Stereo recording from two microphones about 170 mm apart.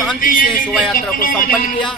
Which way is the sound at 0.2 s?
55° left (ahead or behind).